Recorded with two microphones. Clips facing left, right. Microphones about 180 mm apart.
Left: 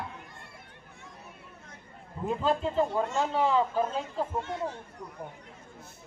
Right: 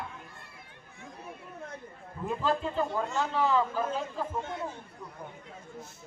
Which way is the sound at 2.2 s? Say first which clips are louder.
Left 2 dB; 25° left (ahead or behind).